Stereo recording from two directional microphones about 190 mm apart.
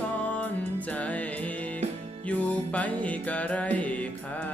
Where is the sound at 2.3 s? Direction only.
5° left (ahead or behind).